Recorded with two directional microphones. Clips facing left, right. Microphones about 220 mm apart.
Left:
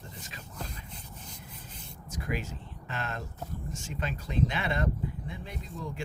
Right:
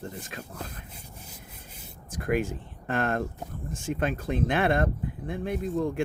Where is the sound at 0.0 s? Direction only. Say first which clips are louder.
Right 9 dB; 50° right (ahead or behind).